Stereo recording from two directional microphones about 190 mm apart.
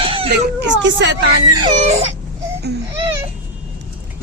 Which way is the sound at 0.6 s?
70° right (ahead or behind).